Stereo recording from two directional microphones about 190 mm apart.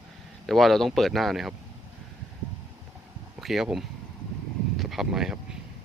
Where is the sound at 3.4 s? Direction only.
Centre (ahead or behind).